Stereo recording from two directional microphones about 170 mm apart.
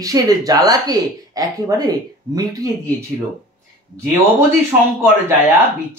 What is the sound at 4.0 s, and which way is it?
Speech, 15° right (ahead or behind).